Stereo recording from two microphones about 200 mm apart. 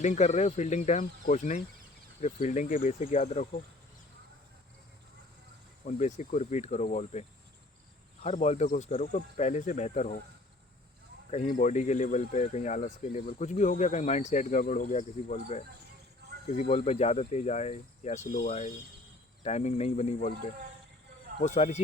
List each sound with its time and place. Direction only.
0.0 s speech: 35° left (ahead or behind)
5.8 s speech: 35° left (ahead or behind)
11.3 s speech: 35° left (ahead or behind)
16.2 s a sound: 60° right (ahead or behind)
16.6 s speech: 35° left (ahead or behind)
21.4 s speech: 35° left (ahead or behind)